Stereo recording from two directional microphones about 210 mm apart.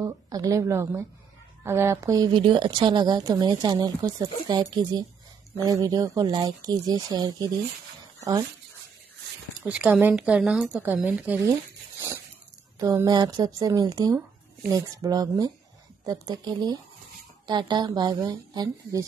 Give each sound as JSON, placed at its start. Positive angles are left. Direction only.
{"t": 0.0, "sound": "a woman's voice", "side_deg": -15}
{"t": 9.7, "sound": "speech", "side_deg": -5}
{"t": 12.7, "sound": "a woman's voice", "side_deg": -15}